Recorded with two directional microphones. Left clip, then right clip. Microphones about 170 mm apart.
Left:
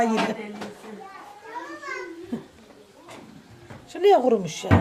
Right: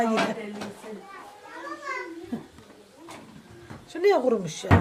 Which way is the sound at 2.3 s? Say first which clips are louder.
Left 3 dB; 10° left (ahead or behind).